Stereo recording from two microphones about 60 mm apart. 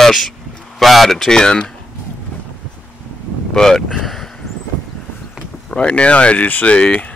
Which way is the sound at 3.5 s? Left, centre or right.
Centre.